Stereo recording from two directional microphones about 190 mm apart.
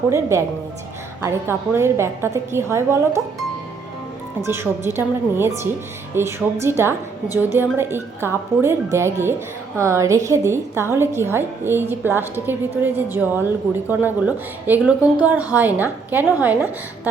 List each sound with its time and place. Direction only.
0.1 s a woman's voice: 15° right (ahead or behind)
4.4 s a woman's voice: 15° right (ahead or behind)